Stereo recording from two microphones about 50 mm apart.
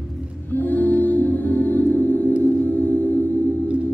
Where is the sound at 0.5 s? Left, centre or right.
Left.